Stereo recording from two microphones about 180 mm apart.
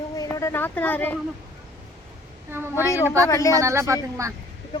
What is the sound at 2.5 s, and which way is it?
Speech, 15° right (ahead or behind).